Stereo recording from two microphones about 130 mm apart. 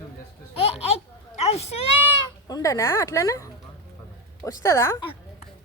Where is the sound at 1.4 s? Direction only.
55° left (ahead or behind).